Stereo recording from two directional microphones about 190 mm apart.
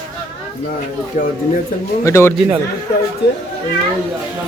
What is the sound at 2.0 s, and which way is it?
Speech, 15° left (ahead or behind).